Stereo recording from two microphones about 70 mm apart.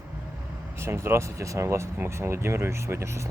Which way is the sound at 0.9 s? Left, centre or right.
Right.